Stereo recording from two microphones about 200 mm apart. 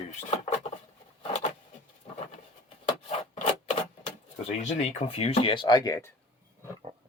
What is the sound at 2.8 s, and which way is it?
Rub, 35° left (ahead or behind).